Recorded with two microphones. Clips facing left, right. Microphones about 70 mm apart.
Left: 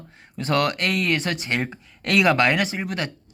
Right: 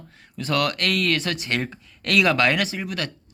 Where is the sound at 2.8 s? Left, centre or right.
Left.